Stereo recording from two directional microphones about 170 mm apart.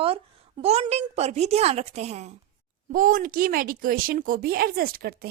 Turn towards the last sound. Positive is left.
turn(degrees=-60)  # may be behind; listen again after turning